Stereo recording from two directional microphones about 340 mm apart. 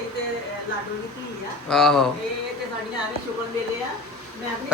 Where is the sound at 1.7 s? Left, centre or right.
Centre.